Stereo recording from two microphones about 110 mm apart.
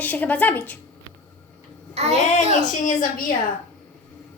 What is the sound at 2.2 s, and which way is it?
Speech, 90° left.